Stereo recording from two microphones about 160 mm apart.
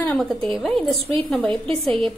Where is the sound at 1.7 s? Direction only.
35° right (ahead or behind).